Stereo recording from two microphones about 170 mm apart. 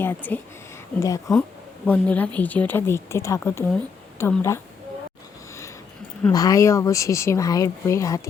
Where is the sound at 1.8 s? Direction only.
10° left (ahead or behind).